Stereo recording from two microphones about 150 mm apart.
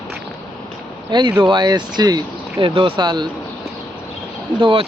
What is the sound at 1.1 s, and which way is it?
Speech, 30° right (ahead or behind).